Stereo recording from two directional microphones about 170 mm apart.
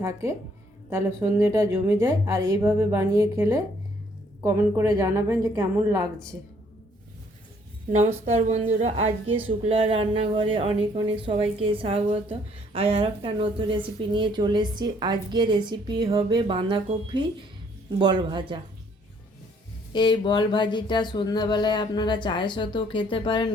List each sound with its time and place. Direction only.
0.0 s a woman's voice: 15° right (ahead or behind)
7.9 s a woman's voice: 40° right (ahead or behind)
19.9 s speech: 25° left (ahead or behind)